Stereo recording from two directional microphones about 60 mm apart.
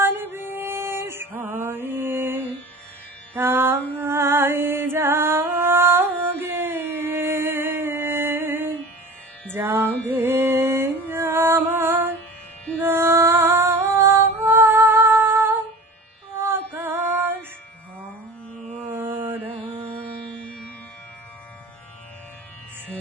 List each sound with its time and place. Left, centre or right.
0.0 s music: right
16.4 s female singing: right
18.9 s a sound: right
20.3 s music: centre